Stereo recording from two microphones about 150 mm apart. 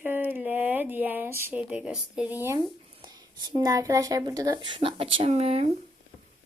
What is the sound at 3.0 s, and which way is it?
Speech, 30° right (ahead or behind).